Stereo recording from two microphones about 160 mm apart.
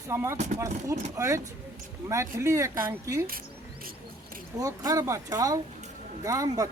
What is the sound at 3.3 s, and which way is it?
Cricket, 65° right (ahead or behind).